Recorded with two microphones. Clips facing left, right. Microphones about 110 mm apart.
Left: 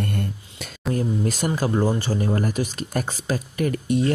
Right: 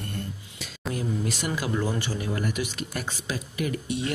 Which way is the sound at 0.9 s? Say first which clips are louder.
Left 5 dB; 45° left (ahead or behind).